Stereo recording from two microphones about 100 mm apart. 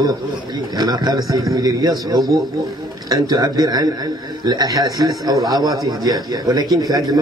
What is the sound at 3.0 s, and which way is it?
A man's voice, 35° right (ahead or behind).